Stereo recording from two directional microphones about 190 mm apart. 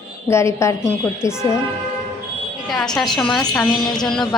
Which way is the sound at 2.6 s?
Centre (ahead or behind).